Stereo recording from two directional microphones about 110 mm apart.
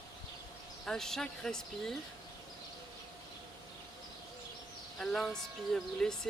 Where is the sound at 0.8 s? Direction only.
5° left (ahead or behind).